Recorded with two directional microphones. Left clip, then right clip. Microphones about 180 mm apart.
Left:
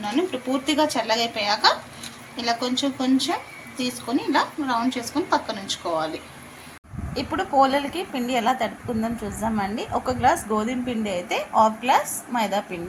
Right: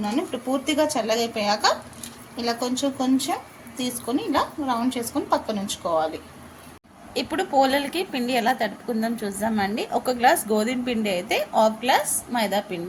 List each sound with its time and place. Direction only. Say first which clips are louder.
0.0 s a woman's voice: left 2 dB; 45° right (ahead or behind)
7.1 s a woman's voice: even; 30° right (ahead or behind)